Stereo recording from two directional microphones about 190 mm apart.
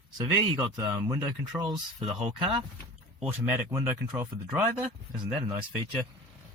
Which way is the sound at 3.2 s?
10° right (ahead or behind).